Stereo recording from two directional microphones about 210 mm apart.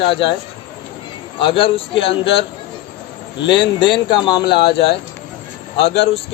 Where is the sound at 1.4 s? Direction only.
25° left (ahead or behind).